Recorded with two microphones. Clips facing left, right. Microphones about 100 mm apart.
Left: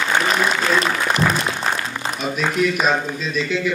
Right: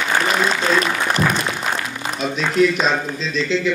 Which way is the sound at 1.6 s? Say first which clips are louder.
Left 1 dB; 35° left (ahead or behind).